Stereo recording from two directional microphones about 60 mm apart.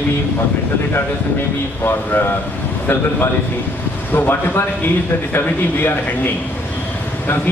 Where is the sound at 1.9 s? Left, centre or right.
Left.